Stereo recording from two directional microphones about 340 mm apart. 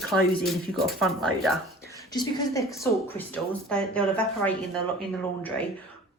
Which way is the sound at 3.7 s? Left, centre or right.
Centre.